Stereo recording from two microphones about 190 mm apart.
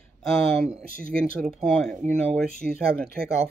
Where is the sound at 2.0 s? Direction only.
40° right (ahead or behind).